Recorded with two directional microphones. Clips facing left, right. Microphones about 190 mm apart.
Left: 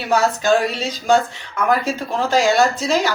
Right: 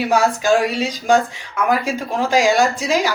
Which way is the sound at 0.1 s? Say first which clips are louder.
Left 1 dB; 10° right (ahead or behind).